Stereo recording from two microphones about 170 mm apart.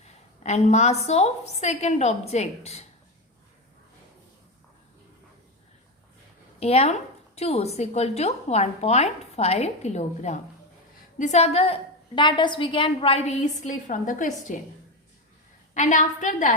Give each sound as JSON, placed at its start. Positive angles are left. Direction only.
{"t": 0.4, "sound": "a woman's voice", "side_deg": 40}
{"t": 6.6, "sound": "a woman's voice", "side_deg": 40}
{"t": 15.7, "sound": "a woman's voice", "side_deg": 45}